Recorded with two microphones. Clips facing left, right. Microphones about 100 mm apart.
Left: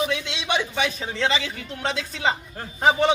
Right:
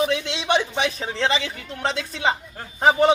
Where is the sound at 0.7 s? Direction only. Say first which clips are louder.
Right 1 dB; 30° right (ahead or behind).